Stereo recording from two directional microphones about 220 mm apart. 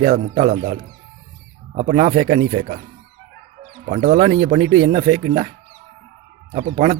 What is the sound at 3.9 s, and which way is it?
A man's voice, 35° right (ahead or behind).